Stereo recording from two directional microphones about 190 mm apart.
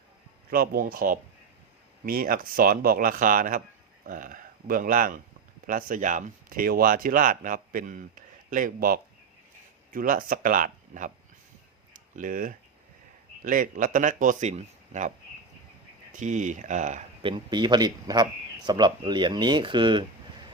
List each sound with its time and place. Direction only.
0.5 s speech: 50° right (ahead or behind)
16.1 s speech: 40° right (ahead or behind)
17.2 s speech: 25° right (ahead or behind)